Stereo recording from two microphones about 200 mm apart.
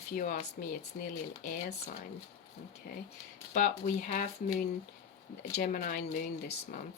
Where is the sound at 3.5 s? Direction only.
40° left (ahead or behind).